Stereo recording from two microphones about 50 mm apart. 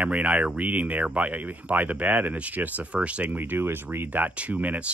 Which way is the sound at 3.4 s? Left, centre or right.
Right.